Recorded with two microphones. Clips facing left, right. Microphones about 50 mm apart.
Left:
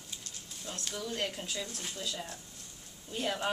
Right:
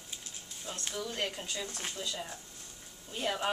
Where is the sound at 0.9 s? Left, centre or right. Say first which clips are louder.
Even; centre.